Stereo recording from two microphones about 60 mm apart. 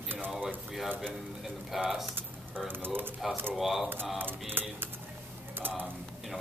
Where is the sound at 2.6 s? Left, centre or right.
Right.